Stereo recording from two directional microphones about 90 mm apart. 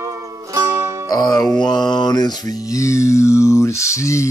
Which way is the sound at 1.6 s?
55° left (ahead or behind).